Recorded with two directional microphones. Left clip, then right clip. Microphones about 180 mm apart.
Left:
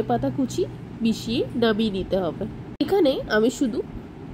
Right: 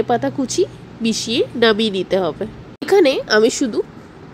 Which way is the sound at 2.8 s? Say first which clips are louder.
Right 7 dB; 25° right (ahead or behind).